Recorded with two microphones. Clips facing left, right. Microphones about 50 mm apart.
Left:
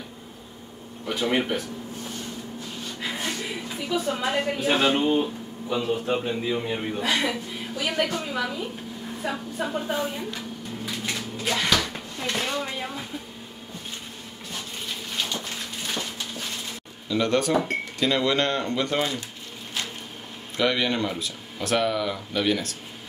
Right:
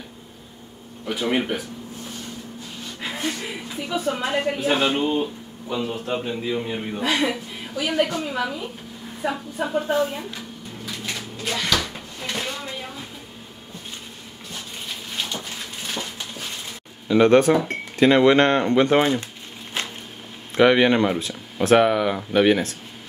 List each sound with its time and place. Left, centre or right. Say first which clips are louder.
1.0 s a man's voice: right 1 dB; centre
3.0 s a sound: right 2 dB; centre
3.9 s a woman's voice: right 1 dB; right
4.3 s a man's voice: right 1 dB; centre
10.9 s a sound: even; centre
11.9 s drawer open or close: left 1 dB; centre
17.1 s speech: right 7 dB; right
20.5 s speech: right 8 dB; right